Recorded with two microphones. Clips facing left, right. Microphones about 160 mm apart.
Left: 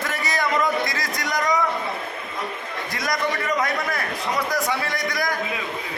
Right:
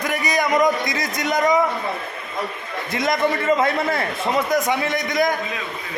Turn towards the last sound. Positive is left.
turn(degrees=-20)  # may be behind; listen again after turning